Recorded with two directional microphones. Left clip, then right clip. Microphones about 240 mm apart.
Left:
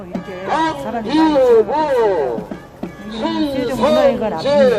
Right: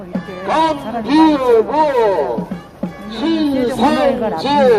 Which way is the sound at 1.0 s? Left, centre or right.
Right.